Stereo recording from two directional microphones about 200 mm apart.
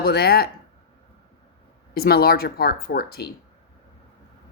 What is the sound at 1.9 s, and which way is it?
Speech, 50° left (ahead or behind).